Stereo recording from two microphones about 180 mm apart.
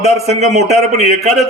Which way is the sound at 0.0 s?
40° right (ahead or behind).